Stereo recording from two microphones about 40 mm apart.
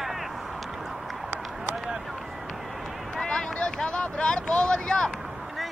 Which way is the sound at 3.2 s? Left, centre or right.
Left.